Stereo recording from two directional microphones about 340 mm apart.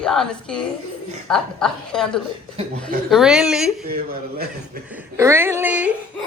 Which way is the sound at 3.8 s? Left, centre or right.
Right.